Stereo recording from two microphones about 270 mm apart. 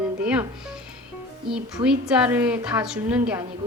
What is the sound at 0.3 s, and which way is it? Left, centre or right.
Music, centre.